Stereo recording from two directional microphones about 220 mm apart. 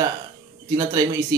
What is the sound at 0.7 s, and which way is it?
Speech, 15° right (ahead or behind).